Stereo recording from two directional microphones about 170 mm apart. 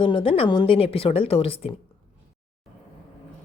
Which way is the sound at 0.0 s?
30° left (ahead or behind).